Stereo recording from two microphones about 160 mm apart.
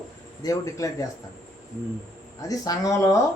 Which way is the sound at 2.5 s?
20° left (ahead or behind).